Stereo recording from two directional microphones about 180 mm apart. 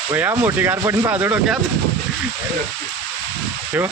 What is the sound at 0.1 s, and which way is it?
Speech, 10° right (ahead or behind).